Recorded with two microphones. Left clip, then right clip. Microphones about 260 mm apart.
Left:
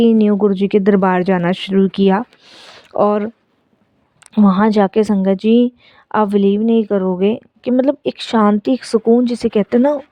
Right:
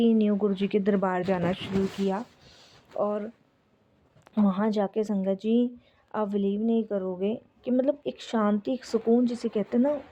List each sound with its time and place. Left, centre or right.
0.0 s a woman's voice: left
4.4 s a woman's voice: left